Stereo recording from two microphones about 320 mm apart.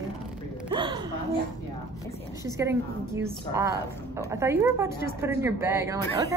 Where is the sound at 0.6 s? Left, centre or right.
Centre.